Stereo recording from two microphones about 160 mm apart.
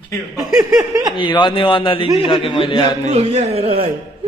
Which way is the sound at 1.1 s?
30° left (ahead or behind).